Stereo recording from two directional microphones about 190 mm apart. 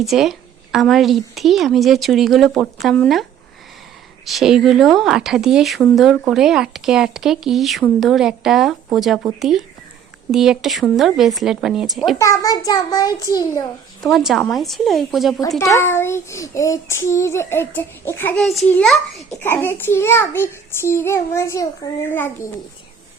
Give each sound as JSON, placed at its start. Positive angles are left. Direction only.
{"t": 0.0, "sound": "speech", "side_deg": 0}
{"t": 4.3, "sound": "speech", "side_deg": 0}
{"t": 12.2, "sound": "a child's voice", "side_deg": 15}
{"t": 14.0, "sound": "speech", "side_deg": 0}
{"t": 15.4, "sound": "child singing", "side_deg": 20}